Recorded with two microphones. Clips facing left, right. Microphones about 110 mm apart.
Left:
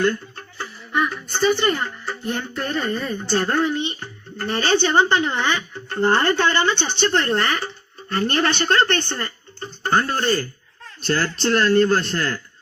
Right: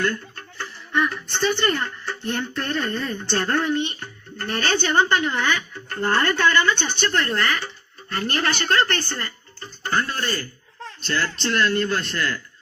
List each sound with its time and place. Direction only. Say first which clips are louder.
0.6 s music: left 1 dB; 5° left (ahead or behind)
1.7 s speech: left 1 dB; 5° left (ahead or behind); by 12.4 s 35° left (ahead or behind)